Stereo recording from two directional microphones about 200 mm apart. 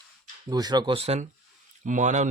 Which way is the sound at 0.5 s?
20° right (ahead or behind).